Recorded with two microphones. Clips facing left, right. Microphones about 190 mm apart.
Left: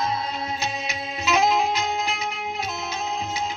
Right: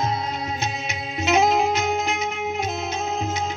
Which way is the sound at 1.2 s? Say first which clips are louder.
Right 2 dB; 55° right (ahead or behind).